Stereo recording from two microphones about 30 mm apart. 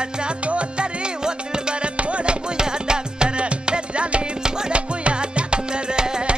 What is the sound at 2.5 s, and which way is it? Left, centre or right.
Music, right.